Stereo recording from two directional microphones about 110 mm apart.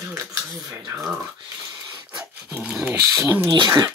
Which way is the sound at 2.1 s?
5° right (ahead or behind).